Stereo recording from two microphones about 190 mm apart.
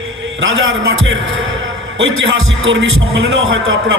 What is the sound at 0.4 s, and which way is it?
A man's voice, 90° right.